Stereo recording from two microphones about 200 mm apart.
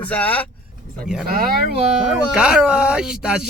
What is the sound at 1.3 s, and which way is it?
Speech, 45° right (ahead or behind).